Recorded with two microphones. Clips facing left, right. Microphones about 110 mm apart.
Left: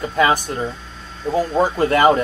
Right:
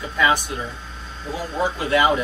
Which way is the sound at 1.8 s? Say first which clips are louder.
Left 4 dB; 45° left (ahead or behind).